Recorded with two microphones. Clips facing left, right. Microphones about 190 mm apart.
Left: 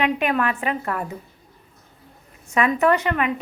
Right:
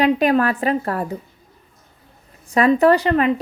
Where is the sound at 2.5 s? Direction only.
35° right (ahead or behind).